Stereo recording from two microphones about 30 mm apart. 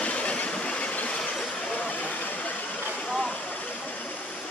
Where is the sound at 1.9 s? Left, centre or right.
Left.